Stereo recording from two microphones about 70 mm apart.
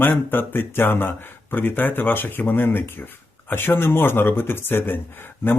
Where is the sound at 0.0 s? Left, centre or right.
Left.